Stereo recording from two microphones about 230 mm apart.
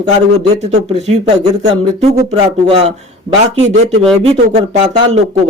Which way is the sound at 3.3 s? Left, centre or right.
Right.